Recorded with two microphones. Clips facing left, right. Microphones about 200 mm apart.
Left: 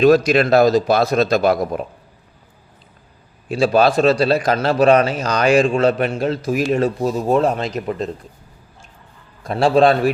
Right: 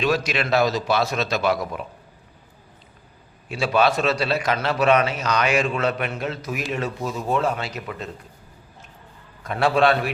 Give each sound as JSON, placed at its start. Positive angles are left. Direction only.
{"t": 0.0, "sound": "a man's voice", "side_deg": 40}
{"t": 3.5, "sound": "a man's voice", "side_deg": 35}
{"t": 9.4, "sound": "a man's voice", "side_deg": 35}